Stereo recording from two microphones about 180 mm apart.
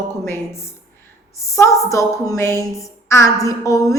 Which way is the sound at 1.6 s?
15° left (ahead or behind).